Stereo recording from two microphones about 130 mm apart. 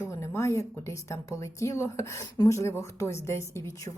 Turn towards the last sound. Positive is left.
turn(degrees=20)  # may be behind; listen again after turning